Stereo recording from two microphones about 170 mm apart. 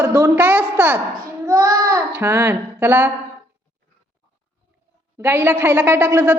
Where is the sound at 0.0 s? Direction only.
10° right (ahead or behind).